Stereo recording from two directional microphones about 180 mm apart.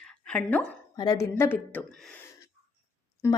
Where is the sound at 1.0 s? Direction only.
20° left (ahead or behind).